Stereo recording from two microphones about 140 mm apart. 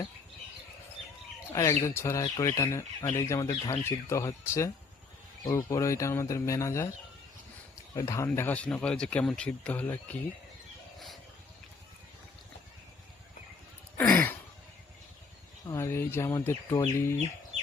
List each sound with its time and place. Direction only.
1.5 s speech: 20° left (ahead or behind)
7.9 s speech: 20° left (ahead or behind)
14.0 s a sound: 10° left (ahead or behind)
15.6 s speech: 20° left (ahead or behind)